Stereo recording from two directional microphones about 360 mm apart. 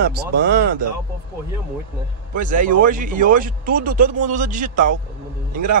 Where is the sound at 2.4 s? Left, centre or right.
Right.